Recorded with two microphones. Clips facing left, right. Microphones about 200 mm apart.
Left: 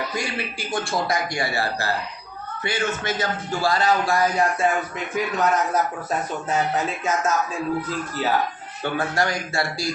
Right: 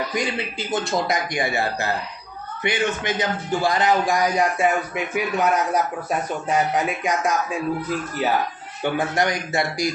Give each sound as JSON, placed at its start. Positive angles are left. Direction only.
{"t": 0.1, "sound": "a man's voice", "side_deg": -20}
{"t": 8.8, "sound": "a man's voice", "side_deg": -20}